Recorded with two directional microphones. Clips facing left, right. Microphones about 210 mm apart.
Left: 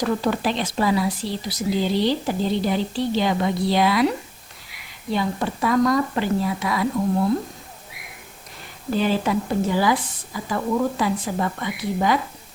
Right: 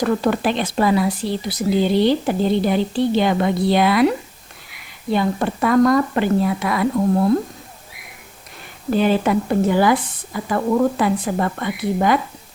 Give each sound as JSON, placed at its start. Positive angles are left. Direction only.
{"t": 0.0, "sound": "speech", "side_deg": -55}
{"t": 5.1, "sound": "speech", "side_deg": -55}
{"t": 8.9, "sound": "speech", "side_deg": -55}